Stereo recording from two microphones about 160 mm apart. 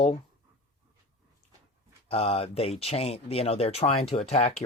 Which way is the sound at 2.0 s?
40° left (ahead or behind).